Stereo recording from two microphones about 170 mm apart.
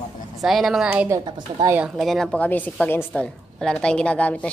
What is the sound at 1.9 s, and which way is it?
A woman's voice, centre (ahead or behind).